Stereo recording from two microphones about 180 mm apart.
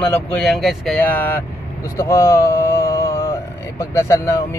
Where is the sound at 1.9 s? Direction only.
15° left (ahead or behind).